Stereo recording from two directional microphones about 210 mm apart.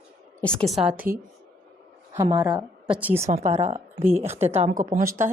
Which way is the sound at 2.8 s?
5° right (ahead or behind).